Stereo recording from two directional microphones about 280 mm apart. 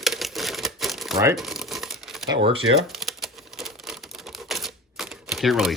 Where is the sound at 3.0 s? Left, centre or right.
Centre.